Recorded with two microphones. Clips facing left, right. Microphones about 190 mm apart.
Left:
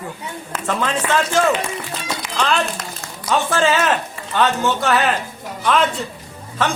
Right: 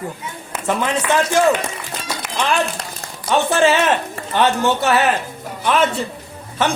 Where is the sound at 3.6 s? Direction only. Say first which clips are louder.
Right 3 dB; 25° right (ahead or behind).